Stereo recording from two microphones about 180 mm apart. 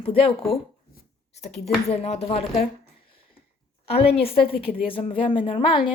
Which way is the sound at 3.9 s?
35° left (ahead or behind).